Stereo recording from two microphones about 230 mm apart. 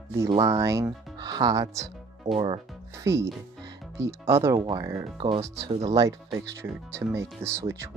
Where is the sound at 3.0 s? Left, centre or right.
Centre.